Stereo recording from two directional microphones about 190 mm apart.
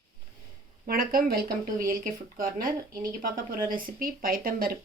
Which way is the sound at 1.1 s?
50° right (ahead or behind).